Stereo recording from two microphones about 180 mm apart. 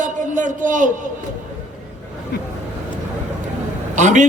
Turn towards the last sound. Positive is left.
turn(degrees=-45)  # may be behind; listen again after turning